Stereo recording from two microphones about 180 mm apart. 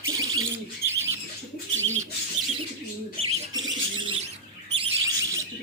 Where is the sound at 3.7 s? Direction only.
30° right (ahead or behind).